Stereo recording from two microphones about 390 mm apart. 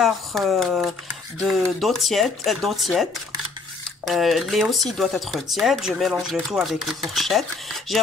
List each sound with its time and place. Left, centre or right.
0.0 s speech: centre